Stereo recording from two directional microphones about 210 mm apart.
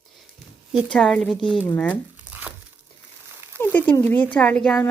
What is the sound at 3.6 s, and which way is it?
Speech, 10° left (ahead or behind).